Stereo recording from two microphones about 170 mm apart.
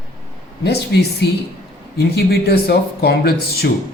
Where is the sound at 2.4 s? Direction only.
70° left (ahead or behind).